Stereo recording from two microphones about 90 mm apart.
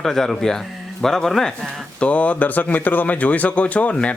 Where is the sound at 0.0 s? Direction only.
5° left (ahead or behind).